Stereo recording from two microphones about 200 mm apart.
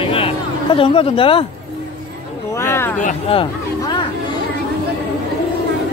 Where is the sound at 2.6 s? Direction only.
10° left (ahead or behind).